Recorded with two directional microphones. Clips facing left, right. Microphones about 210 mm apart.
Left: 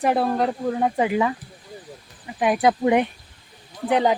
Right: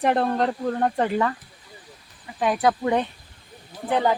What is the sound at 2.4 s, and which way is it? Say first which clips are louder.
Speech: left 3 dB; 15° left (ahead or behind).